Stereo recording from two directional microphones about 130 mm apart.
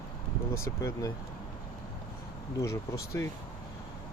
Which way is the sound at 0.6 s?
25° left (ahead or behind).